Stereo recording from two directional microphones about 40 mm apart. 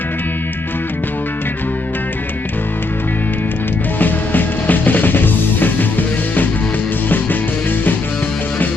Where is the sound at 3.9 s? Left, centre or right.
Left.